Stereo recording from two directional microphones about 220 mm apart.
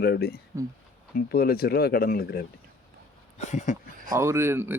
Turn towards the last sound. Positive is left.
turn(degrees=-10)  # may be behind; listen again after turning